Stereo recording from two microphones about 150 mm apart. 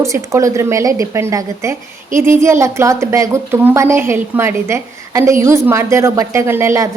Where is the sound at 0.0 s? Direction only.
20° right (ahead or behind).